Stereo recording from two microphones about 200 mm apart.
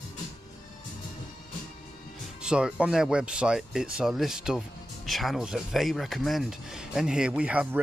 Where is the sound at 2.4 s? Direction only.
5° right (ahead or behind).